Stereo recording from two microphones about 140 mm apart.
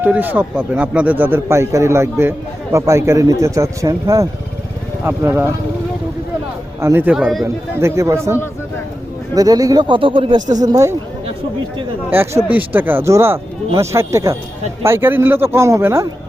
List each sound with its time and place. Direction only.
0.0 s a man's voice: 15° right (ahead or behind)
6.8 s a man's voice: 15° right (ahead or behind)
7.2 s speech: centre (ahead or behind)
7.4 s speech: 20° right (ahead or behind); by 10.4 s 35° right (ahead or behind)
10.6 s speech: 25° right (ahead or behind)
12.1 s a man's voice: 15° right (ahead or behind)